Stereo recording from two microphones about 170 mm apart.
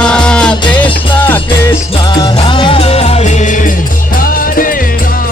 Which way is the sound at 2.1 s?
25° left (ahead or behind).